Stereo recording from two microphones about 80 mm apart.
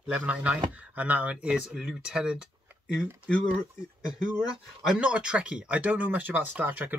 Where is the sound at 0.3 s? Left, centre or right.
Centre.